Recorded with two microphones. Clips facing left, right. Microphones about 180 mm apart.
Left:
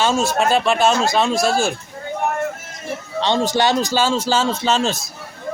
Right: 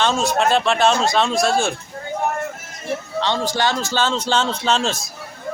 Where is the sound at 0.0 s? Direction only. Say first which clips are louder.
Left 1 dB; 5° left (ahead or behind).